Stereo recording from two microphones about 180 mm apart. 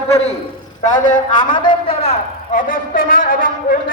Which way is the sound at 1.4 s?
25° left (ahead or behind).